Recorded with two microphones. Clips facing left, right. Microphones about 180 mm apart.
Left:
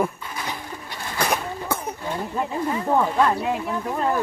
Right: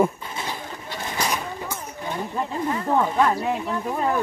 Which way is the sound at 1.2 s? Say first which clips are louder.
Left 3 dB; 55° left (ahead or behind).